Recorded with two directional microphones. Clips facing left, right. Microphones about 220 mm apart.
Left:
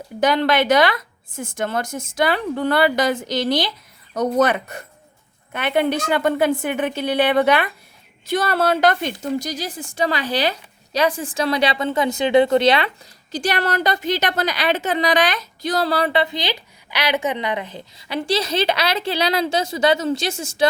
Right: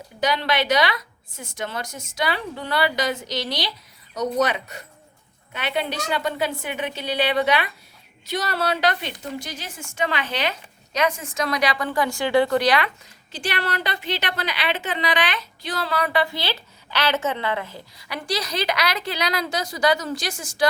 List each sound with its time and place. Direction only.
0.2 s a woman's voice: 50° left (ahead or behind); by 12.9 s 25° left (ahead or behind)
13.3 s a woman's voice: 40° left (ahead or behind); by 20.7 s 25° left (ahead or behind)